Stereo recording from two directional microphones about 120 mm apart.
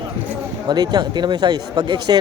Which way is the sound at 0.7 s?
35° right (ahead or behind).